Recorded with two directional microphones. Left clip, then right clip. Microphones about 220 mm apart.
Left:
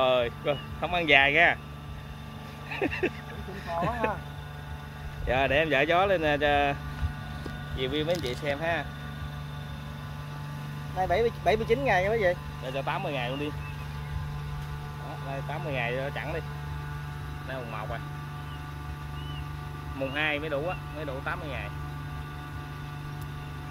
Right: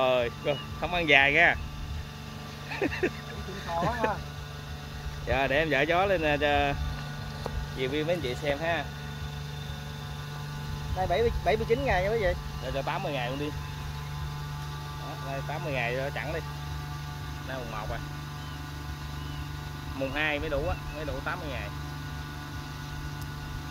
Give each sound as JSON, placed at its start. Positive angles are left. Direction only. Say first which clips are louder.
{"t": 0.0, "sound": "speech", "louder": "left 1 dB", "side_deg": 0}
{"t": 2.7, "sound": "speech", "louder": "even", "side_deg": 0}
{"t": 5.2, "sound": "speech", "louder": "left 1 dB", "side_deg": 5}
{"t": 11.0, "sound": "speech", "louder": "left 1 dB", "side_deg": 30}
{"t": 12.7, "sound": "speech", "louder": "left 1 dB", "side_deg": 10}
{"t": 15.5, "sound": "speech", "louder": "even", "side_deg": 0}
{"t": 20.0, "sound": "speech", "louder": "even", "side_deg": 5}